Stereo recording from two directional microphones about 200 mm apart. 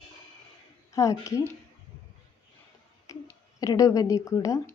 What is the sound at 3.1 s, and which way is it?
Speech, 15° left (ahead or behind).